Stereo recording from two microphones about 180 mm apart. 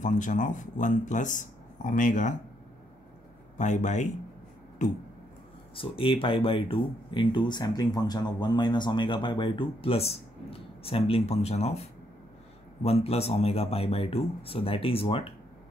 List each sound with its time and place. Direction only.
0.0 s speech: 45° left (ahead or behind)
3.5 s speech: 40° left (ahead or behind)
5.8 s speech: 30° left (ahead or behind)